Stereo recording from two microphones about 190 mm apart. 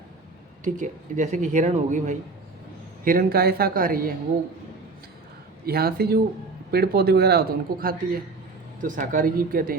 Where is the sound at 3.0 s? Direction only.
50° right (ahead or behind).